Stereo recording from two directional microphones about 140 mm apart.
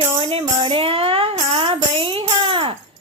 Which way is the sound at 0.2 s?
40° right (ahead or behind).